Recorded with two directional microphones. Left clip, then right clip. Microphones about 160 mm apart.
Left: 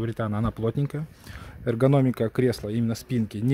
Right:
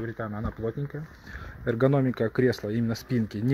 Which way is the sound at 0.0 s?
65° left (ahead or behind).